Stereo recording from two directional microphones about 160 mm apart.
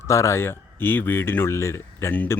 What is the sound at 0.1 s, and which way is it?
Speech, 20° left (ahead or behind).